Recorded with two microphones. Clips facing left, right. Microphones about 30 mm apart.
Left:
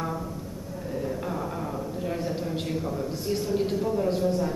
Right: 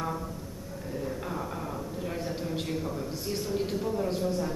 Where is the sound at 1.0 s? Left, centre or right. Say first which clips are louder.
Left 3 dB; centre.